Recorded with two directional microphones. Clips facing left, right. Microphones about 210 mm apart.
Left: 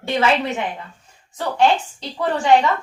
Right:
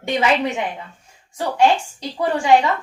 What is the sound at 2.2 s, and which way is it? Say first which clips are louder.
Speech: even; 10° right (ahead or behind).